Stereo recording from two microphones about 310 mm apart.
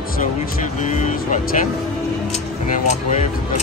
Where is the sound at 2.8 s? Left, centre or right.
Left.